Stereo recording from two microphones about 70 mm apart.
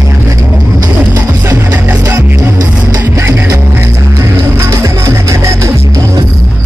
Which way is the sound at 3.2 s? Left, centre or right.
Right.